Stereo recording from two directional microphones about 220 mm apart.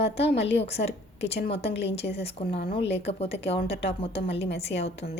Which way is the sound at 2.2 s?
25° left (ahead or behind).